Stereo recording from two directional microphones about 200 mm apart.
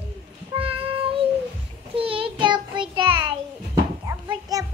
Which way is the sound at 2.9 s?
25° right (ahead or behind).